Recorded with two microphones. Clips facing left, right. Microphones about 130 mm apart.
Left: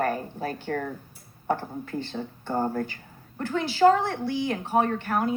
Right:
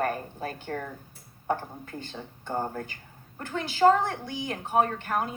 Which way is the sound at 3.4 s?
50° right (ahead or behind).